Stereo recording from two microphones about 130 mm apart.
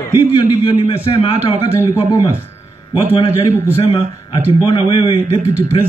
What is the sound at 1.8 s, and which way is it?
Speech, 30° left (ahead or behind).